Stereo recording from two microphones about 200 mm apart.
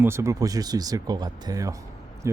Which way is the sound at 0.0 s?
15° right (ahead or behind).